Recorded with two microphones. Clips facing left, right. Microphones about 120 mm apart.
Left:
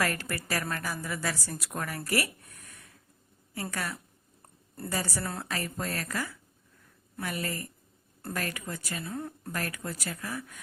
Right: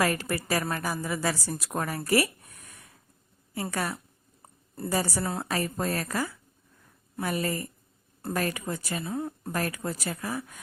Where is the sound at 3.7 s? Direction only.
30° right (ahead or behind).